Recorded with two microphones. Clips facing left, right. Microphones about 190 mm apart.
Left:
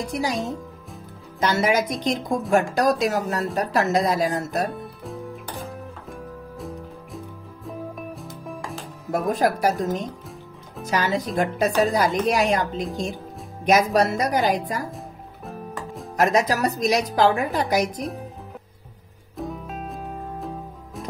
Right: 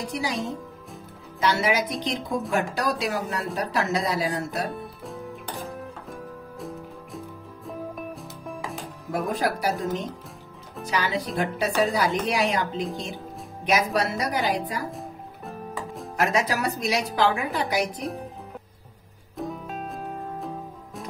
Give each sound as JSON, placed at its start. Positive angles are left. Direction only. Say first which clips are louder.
{"t": 0.1, "sound": "speech", "louder": "left 4 dB", "side_deg": 45}
{"t": 1.4, "sound": "speech", "louder": "left 3 dB", "side_deg": 45}
{"t": 5.0, "sound": "music", "louder": "left 2 dB", "side_deg": 0}
{"t": 9.1, "sound": "speech", "louder": "left 4 dB", "side_deg": 45}
{"t": 10.9, "sound": "speech", "louder": "left 3 dB", "side_deg": 45}
{"t": 14.9, "sound": "music", "louder": "right 1 dB", "side_deg": 0}
{"t": 16.2, "sound": "a woman's voice", "louder": "left 4 dB", "side_deg": 40}
{"t": 19.3, "sound": "music", "louder": "left 1 dB", "side_deg": 0}